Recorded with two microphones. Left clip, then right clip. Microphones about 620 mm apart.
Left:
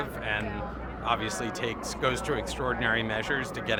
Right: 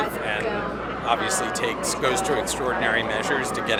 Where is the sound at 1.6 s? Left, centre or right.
Left.